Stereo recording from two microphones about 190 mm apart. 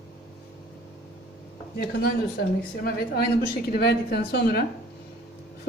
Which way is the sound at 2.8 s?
55° left (ahead or behind).